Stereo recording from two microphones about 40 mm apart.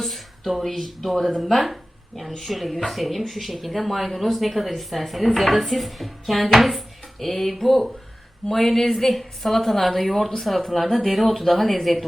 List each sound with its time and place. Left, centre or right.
0.0 s speech: centre
1.7 s a sound: centre
2.4 s speech: centre